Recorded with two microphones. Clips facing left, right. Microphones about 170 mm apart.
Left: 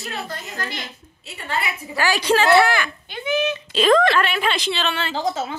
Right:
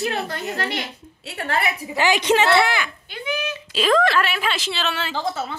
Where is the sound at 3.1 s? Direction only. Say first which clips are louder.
Left 5 dB; 20° left (ahead or behind).